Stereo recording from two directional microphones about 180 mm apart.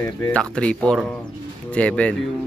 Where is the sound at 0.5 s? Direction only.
5° left (ahead or behind).